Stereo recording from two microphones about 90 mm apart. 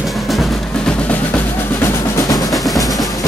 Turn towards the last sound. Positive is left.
turn(degrees=45)  # may be behind; listen again after turning